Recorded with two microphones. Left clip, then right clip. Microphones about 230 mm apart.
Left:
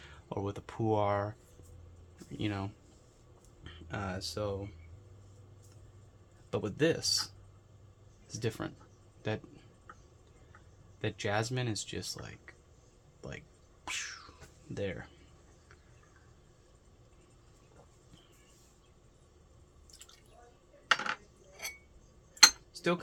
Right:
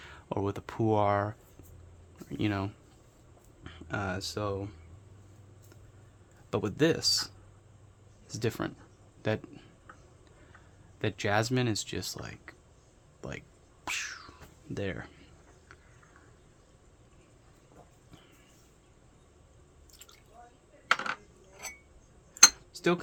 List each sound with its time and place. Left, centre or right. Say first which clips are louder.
0.0 s speech: right 5 dB; right
6.5 s speech: right 3 dB; right
8.3 s speech: right 4 dB; right
11.0 s speech: right 4 dB; right
13.8 s cat: right 4 dB; right
14.8 s speech: right 1 dB; right
20.9 s a sound: right 1 dB; centre
22.7 s cutlery: right 4 dB; right